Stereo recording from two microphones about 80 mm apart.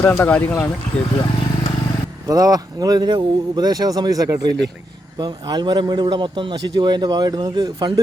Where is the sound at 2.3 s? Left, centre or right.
Right.